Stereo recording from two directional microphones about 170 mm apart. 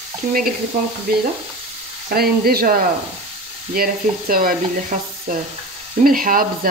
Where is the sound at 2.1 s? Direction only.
65° right (ahead or behind).